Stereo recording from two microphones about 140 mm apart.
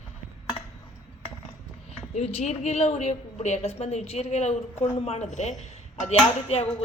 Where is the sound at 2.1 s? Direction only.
50° left (ahead or behind).